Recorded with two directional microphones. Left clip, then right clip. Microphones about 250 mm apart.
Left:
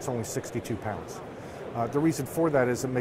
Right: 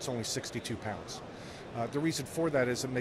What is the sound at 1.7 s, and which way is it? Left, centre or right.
Speech, centre.